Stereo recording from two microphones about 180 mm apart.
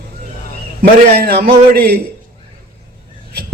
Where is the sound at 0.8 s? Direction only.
55° right (ahead or behind).